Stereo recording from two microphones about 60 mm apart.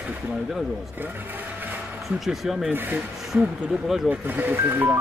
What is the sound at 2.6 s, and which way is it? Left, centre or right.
Speech, right.